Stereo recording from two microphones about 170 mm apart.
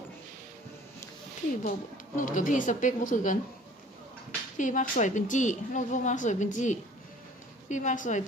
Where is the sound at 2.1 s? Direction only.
50° left (ahead or behind).